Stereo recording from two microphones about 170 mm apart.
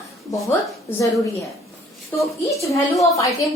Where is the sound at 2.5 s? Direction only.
20° left (ahead or behind).